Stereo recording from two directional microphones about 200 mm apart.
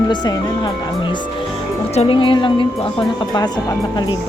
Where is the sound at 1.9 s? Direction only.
30° left (ahead or behind).